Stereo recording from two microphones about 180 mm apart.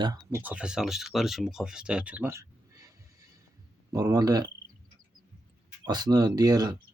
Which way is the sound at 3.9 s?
20° right (ahead or behind).